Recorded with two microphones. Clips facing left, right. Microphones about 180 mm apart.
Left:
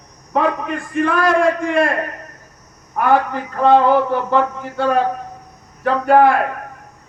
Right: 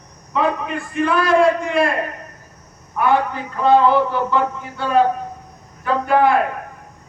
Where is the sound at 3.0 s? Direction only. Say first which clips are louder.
Left 2 dB; 50° left (ahead or behind).